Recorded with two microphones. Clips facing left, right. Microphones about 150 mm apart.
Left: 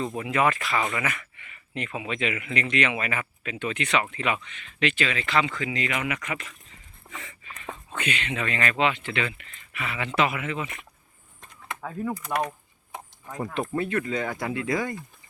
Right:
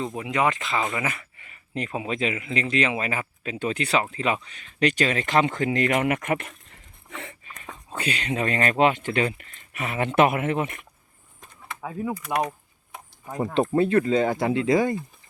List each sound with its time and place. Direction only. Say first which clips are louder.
0.0 s speech: even; 15° right (ahead or behind); by 7.3 s 60° right (ahead or behind)
7.9 s speech: right 3 dB; 35° right (ahead or behind); by 10.8 s 55° right (ahead or behind)
11.3 s a sound: left 1 dB; 10° right (ahead or behind)
12.3 s speech: right 3 dB; 15° right (ahead or behind)
13.4 s speech: right 7 dB; 30° right (ahead or behind)